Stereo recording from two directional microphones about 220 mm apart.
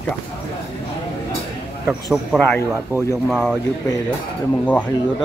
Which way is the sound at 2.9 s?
10° right (ahead or behind).